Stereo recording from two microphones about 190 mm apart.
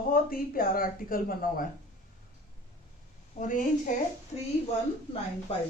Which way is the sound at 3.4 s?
45° left (ahead or behind).